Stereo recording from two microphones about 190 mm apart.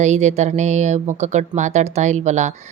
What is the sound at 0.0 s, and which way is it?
Speech, 35° right (ahead or behind).